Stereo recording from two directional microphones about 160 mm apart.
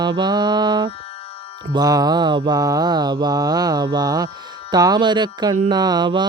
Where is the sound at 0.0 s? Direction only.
25° right (ahead or behind).